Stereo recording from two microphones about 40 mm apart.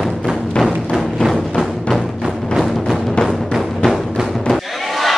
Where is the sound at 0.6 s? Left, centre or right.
Centre.